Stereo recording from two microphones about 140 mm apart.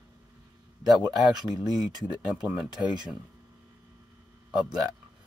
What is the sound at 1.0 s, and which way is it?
Speech, 5° right (ahead or behind).